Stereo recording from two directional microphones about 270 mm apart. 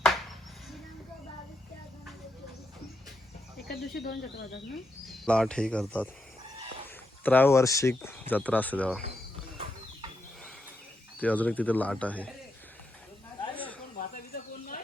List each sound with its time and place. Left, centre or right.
3.7 s speech: left
5.0 s speech: centre
7.3 s speech: centre
11.2 s speech: centre
13.5 s snake: centre
14.0 s bird: left